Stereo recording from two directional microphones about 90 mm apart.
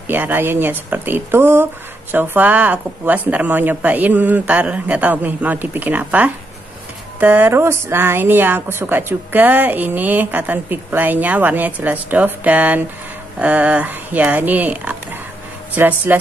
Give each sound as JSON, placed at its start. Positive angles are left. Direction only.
{"t": 0.1, "sound": "speech", "side_deg": -20}